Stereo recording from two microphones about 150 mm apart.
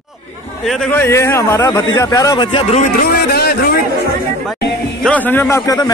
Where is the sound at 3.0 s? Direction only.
90° left.